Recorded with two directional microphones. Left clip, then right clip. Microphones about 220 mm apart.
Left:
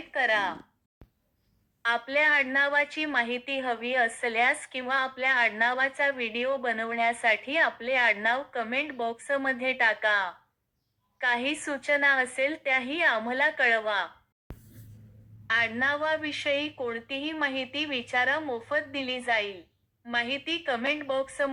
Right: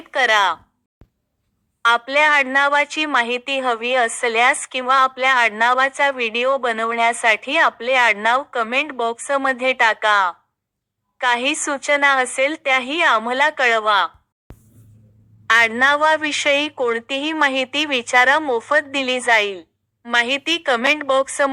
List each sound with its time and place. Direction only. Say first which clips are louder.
0.1 s speech: right 10 dB; 40° right (ahead or behind)
1.8 s a woman's voice: right 10 dB; 30° right (ahead or behind)
15.4 s a woman's voice: right 12 dB; 40° right (ahead or behind)